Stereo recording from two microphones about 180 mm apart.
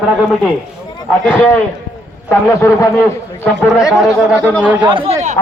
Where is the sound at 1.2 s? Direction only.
10° left (ahead or behind).